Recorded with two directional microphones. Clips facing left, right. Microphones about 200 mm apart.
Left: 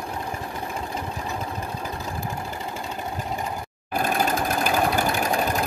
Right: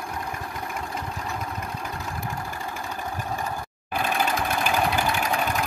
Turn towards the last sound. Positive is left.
turn(degrees=40)  # may be behind; listen again after turning